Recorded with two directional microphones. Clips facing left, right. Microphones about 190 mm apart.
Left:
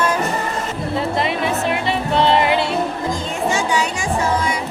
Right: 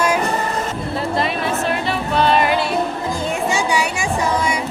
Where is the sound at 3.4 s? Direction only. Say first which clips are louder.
Left 2 dB; 10° right (ahead or behind).